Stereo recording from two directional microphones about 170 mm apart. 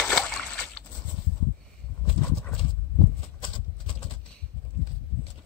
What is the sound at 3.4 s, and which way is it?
Horse, 30° left (ahead or behind).